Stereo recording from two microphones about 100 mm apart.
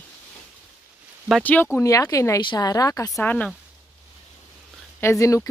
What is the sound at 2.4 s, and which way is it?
Speech, 45° left (ahead or behind).